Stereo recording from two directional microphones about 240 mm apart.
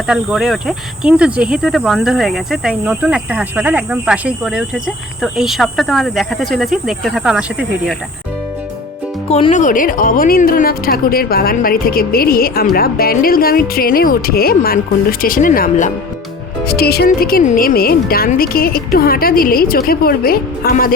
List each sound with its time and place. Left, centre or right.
0.1 s speech: centre
9.3 s speech: left